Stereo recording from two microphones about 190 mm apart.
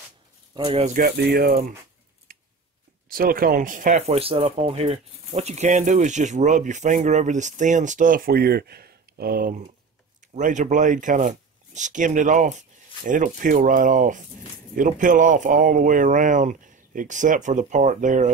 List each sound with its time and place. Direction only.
0.7 s speech: 30° right (ahead or behind)
0.9 s speech: 55° right (ahead or behind)
3.1 s speech: 50° right (ahead or behind)
10.3 s speech: 40° right (ahead or behind)